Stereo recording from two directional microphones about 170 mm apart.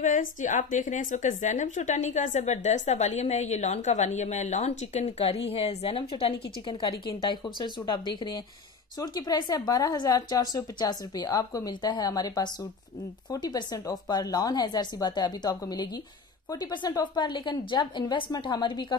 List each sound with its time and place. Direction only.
0.0 s a woman's voice: 50° left (ahead or behind); by 18.9 s 25° left (ahead or behind)